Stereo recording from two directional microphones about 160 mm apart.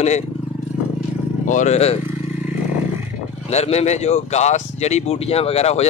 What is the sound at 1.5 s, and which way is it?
Speech, 45° left (ahead or behind).